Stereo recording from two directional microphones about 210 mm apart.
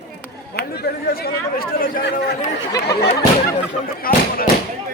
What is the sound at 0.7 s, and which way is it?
Speech, 45° left (ahead or behind).